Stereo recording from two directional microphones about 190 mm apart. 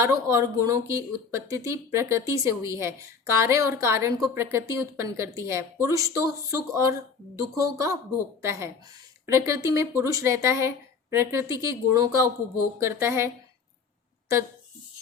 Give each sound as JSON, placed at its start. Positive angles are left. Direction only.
{"t": 0.0, "sound": "speech", "side_deg": -15}